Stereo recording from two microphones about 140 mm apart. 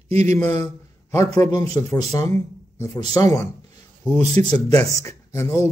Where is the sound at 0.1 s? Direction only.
50° right (ahead or behind).